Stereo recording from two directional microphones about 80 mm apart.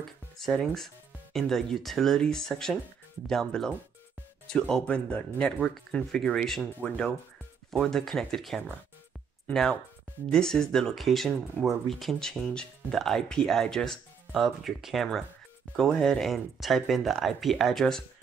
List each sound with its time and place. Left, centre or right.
0.4 s speech: centre
6.6 s speech: centre
7.7 s speech: centre
14.3 s speech: centre